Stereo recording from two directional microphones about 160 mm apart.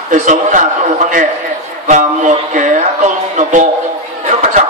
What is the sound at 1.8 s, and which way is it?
Speech, 50° right (ahead or behind).